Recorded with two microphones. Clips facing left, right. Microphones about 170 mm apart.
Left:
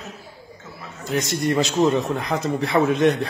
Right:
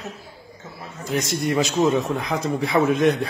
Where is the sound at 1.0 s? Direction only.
Centre (ahead or behind).